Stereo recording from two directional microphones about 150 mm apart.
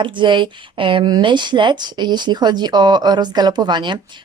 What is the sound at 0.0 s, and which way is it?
Speech, 30° right (ahead or behind).